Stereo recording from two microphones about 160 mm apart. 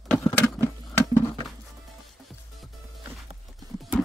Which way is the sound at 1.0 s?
25° left (ahead or behind).